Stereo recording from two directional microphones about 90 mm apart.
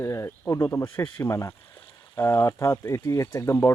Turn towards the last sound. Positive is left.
turn(degrees=30)  # may be behind; listen again after turning